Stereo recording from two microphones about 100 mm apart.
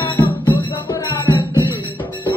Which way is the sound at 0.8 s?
35° left (ahead or behind).